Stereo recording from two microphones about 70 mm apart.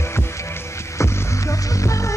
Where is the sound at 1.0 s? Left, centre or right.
Left.